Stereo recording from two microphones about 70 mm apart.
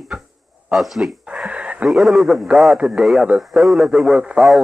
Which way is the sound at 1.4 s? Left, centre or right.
Centre.